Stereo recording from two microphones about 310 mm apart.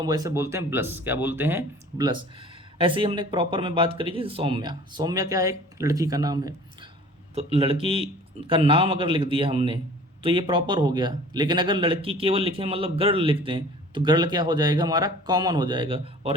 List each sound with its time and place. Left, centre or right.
0.0 s a man's voice: centre